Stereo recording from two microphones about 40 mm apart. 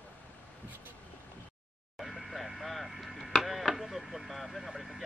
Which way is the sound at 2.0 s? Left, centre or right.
Centre.